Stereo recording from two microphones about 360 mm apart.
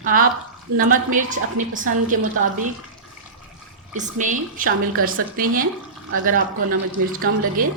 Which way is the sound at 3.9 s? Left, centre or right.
Right.